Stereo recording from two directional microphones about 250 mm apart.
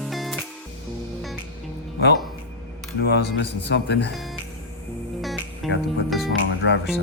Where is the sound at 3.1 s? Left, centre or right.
Left.